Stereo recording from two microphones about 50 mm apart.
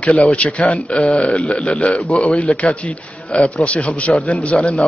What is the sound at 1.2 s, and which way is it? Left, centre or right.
Speech, left.